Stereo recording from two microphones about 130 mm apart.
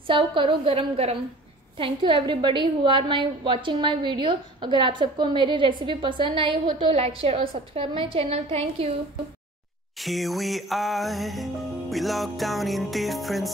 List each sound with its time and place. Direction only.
0.0 s a woman's voice: 40° right (ahead or behind)
10.0 s music: centre (ahead or behind)